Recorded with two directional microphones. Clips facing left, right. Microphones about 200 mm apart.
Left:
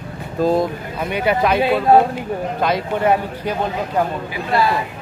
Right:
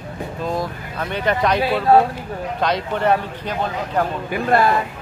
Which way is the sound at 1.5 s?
20° left (ahead or behind).